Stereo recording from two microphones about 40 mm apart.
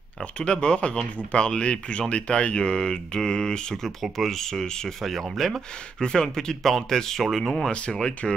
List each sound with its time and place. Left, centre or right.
0.4 s speech: left
3.8 s speech: centre
5.0 s speech: centre